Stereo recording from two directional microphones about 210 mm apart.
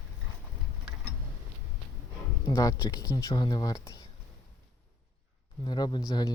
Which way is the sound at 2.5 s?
15° left (ahead or behind).